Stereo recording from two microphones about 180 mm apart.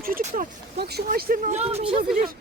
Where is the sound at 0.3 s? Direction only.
60° right (ahead or behind).